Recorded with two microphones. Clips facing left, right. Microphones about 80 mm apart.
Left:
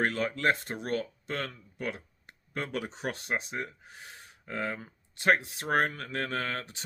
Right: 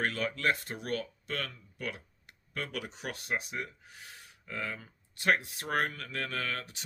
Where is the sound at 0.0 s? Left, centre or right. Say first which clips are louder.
Left 3 dB; left.